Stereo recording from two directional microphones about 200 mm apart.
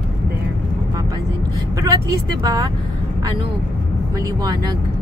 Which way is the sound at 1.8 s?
20° right (ahead or behind).